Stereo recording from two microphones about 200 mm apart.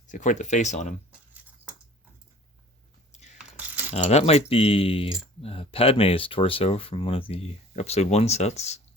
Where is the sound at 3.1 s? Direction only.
35° left (ahead or behind).